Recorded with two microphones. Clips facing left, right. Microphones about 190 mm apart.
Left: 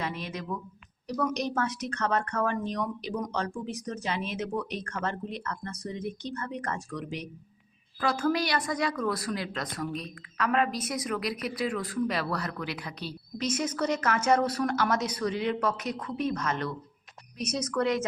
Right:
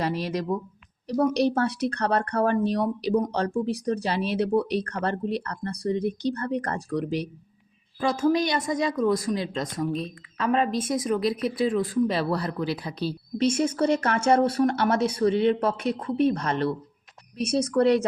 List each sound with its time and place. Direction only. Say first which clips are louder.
0.0 s speech: right 8 dB; 35° right (ahead or behind)
8.0 s speech: right 5 dB; 20° right (ahead or behind)